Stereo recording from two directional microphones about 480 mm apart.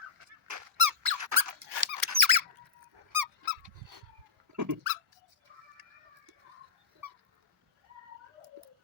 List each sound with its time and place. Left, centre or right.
0.4 s squeak: right
4.5 s dog: right